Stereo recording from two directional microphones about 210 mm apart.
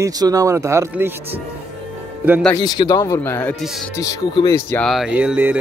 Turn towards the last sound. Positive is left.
turn(degrees=-10)  # may be behind; listen again after turning